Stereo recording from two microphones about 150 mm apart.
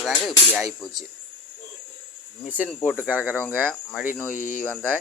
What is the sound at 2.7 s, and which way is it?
Speech, 5° left (ahead or behind).